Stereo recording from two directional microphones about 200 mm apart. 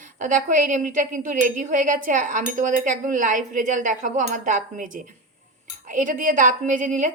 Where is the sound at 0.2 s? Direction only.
40° right (ahead or behind).